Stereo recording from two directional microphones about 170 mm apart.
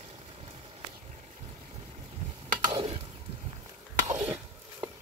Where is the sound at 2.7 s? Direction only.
30° right (ahead or behind).